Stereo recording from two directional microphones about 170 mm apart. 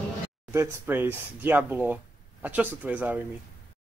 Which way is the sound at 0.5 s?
10° right (ahead or behind).